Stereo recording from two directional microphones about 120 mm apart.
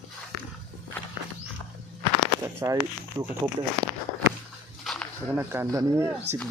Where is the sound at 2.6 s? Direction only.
25° right (ahead or behind).